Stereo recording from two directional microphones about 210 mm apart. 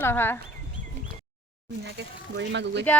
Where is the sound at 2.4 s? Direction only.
55° right (ahead or behind).